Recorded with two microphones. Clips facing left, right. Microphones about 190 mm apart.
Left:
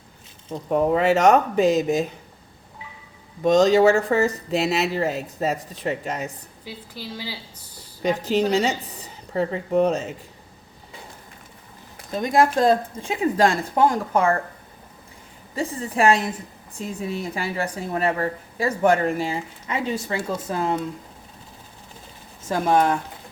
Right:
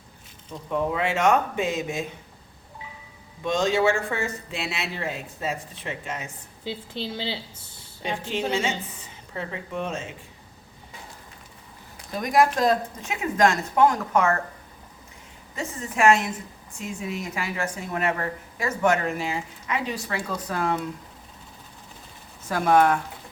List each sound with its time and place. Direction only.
0.5 s speech: 40° left (ahead or behind)
3.4 s speech: 40° left (ahead or behind)
6.7 s a woman's voice: 25° right (ahead or behind)
8.2 s a woman's voice: 40° left (ahead or behind)
12.1 s speech: 25° left (ahead or behind)
15.5 s speech: 35° left (ahead or behind)
22.4 s speech: 25° left (ahead or behind)